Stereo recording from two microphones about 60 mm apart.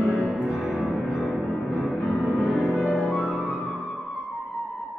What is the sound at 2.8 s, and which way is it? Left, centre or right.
Music, centre.